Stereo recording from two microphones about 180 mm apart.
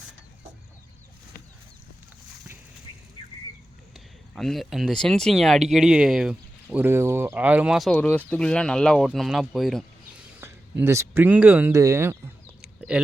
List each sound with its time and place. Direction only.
3.9 s speech: centre (ahead or behind)
7.9 s speech: 10° left (ahead or behind)
10.4 s speech: 15° right (ahead or behind)